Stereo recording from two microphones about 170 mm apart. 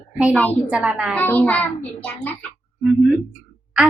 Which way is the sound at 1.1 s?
10° left (ahead or behind).